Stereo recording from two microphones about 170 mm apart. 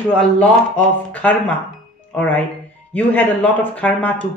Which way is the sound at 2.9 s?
10° left (ahead or behind).